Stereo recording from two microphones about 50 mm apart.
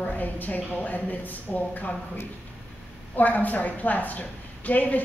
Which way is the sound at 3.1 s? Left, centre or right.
Left.